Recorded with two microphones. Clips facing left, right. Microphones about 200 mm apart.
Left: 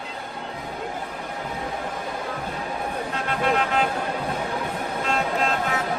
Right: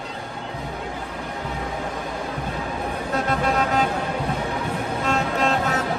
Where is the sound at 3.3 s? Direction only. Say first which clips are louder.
Even; 40° right (ahead or behind).